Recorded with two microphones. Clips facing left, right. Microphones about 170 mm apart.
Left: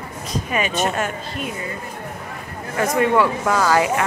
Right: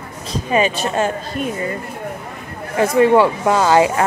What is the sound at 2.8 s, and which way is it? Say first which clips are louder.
Speech: right 5 dB; 30° right (ahead or behind).